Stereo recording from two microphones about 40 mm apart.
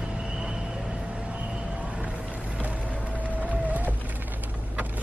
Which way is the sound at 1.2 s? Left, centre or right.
Right.